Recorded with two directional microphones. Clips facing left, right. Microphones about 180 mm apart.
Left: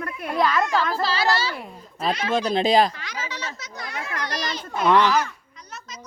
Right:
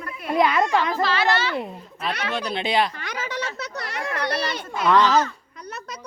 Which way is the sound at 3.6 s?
65° right (ahead or behind).